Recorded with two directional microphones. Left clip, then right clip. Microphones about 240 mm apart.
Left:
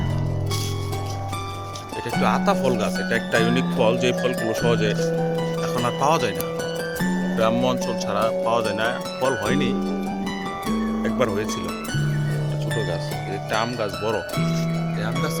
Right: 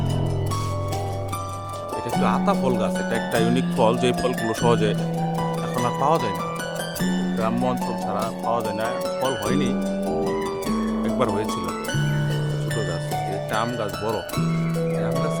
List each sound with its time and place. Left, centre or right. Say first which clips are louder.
2.2 s speech: left 2 dB; centre
5.8 s speech: even; centre
7.3 s speech: left 4 dB; centre
11.0 s music: even; centre
13.5 s speech: left 4 dB; centre